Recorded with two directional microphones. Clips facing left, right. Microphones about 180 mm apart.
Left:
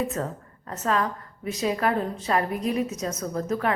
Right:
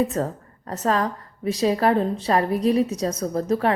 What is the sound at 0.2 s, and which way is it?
A woman's voice, 35° right (ahead or behind).